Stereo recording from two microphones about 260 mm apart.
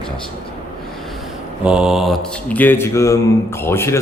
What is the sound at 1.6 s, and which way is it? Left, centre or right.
Speech, centre.